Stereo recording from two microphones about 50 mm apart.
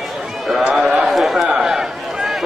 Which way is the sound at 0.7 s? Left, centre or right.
Centre.